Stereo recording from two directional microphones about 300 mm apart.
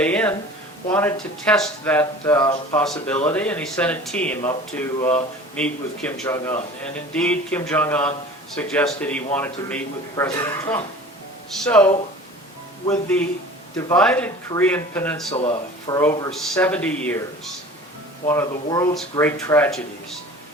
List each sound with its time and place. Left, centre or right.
0.0 s speech: centre
12.9 s speech: centre
15.3 s speech: centre